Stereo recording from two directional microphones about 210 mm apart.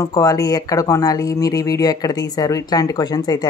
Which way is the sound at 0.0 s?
15° left (ahead or behind).